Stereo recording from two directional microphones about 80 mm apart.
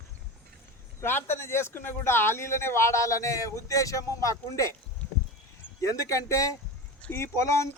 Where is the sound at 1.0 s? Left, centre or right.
Left.